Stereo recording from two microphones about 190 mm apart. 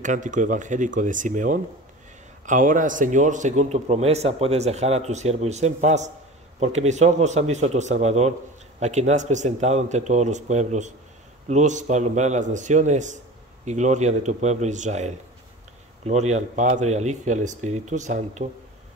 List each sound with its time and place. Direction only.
0.0 s a man's voice: 40° right (ahead or behind)